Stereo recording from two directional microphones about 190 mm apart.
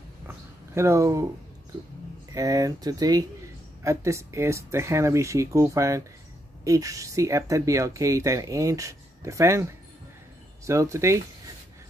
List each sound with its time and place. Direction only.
0.3 s speech: 15° right (ahead or behind)
2.3 s speech: 20° right (ahead or behind)